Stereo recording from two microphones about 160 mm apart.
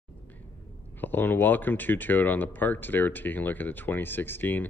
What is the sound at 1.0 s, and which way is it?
Speech, 10° left (ahead or behind).